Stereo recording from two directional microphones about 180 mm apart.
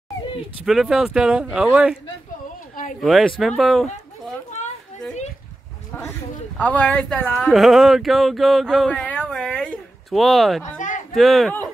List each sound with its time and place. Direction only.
0.7 s speech: centre (ahead or behind)
3.0 s speech: centre (ahead or behind)
6.6 s a woman's voice: 5° left (ahead or behind)
7.5 s speech: centre (ahead or behind)
10.8 s a sound: 45° left (ahead or behind)
11.1 s speech: centre (ahead or behind)